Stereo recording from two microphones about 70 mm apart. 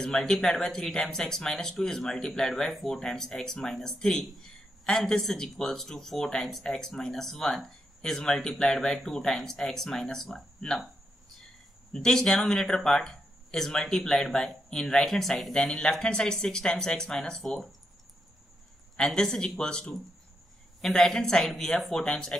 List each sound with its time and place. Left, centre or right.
0.0 s speech: centre
11.9 s speech: centre
18.9 s speech: centre